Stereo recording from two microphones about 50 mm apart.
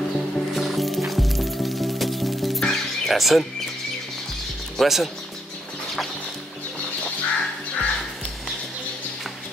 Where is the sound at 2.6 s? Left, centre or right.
Centre.